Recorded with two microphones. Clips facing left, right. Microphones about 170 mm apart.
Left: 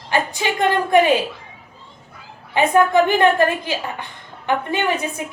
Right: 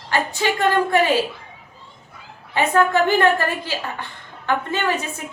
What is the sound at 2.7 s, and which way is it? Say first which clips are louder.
Speech: left 2 dB; 15° left (ahead or behind).